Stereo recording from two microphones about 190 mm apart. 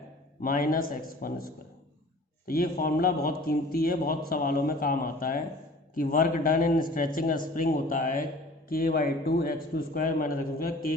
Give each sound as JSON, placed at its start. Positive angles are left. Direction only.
{"t": 0.4, "sound": "a man's voice", "side_deg": 50}